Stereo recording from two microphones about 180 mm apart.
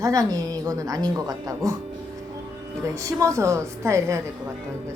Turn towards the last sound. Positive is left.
turn(degrees=-15)  # may be behind; listen again after turning